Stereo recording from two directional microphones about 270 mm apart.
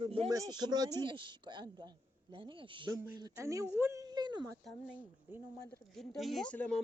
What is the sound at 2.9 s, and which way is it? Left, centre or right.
Speech, centre.